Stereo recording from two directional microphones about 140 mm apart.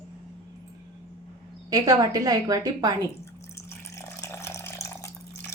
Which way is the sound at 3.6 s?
20° left (ahead or behind).